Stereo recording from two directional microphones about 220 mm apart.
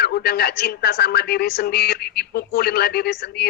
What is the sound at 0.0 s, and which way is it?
A woman's voice, 45° left (ahead or behind).